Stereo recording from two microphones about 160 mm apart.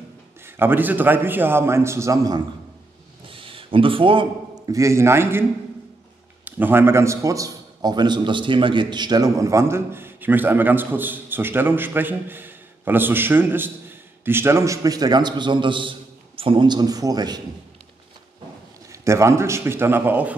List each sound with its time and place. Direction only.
0.5 s a man's voice: 15° right (ahead or behind)
3.3 s a sound: 35° right (ahead or behind)
4.7 s a man's voice: 20° right (ahead or behind)
6.4 s a man's voice: 10° right (ahead or behind)
18.9 s a man's voice: 15° right (ahead or behind)